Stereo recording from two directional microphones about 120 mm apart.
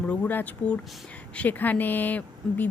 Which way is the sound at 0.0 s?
15° left (ahead or behind).